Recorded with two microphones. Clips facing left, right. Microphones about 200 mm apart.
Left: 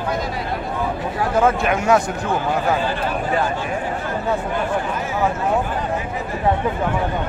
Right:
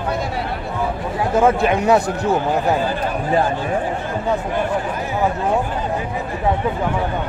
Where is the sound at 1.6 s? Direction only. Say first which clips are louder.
Right 2 dB; 35° right (ahead or behind).